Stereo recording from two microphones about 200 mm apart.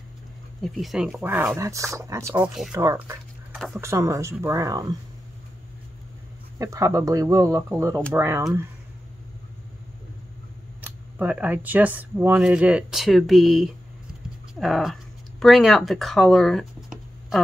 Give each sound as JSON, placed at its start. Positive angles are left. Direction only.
{"t": 0.6, "sound": "speech", "side_deg": 0}
{"t": 6.6, "sound": "speech", "side_deg": -15}
{"t": 11.1, "sound": "speech", "side_deg": -10}